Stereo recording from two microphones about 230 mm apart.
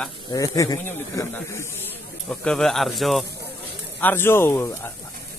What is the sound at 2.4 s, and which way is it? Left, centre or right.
Speech, centre.